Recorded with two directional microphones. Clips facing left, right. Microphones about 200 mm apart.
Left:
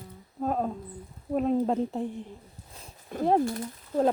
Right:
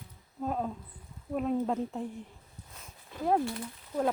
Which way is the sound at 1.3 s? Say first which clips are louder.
Left 5 dB; 35° left (ahead or behind).